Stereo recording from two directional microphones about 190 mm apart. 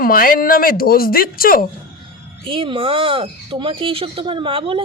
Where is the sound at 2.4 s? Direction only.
30° right (ahead or behind).